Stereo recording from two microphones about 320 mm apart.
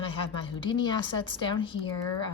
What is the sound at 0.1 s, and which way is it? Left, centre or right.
Speech, centre.